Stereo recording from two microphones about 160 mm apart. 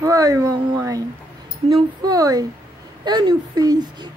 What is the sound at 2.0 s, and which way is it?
Speech, 25° right (ahead or behind).